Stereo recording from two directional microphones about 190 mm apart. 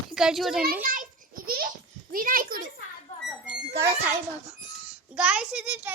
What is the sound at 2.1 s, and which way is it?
Speech, 45° right (ahead or behind).